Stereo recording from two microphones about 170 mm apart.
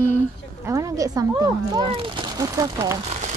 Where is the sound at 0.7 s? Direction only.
20° right (ahead or behind).